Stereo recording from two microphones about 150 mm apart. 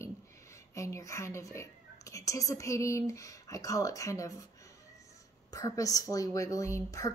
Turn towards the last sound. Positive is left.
turn(degrees=20)  # may be behind; listen again after turning